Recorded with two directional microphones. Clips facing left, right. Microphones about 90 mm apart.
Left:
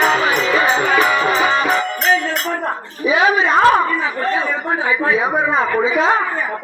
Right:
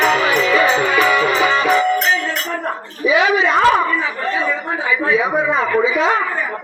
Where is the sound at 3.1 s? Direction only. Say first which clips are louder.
Even; 40° left (ahead or behind).